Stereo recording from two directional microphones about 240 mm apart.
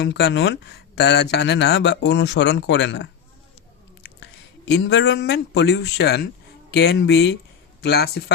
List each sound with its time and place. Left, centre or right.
0.0 s speech: left
4.2 s speech: left